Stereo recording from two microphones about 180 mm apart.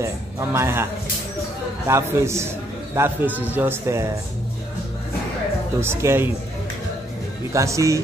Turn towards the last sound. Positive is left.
turn(degrees=-15)  # may be behind; listen again after turning